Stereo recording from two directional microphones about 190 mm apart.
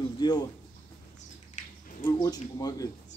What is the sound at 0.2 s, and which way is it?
Speech, 25° left (ahead or behind).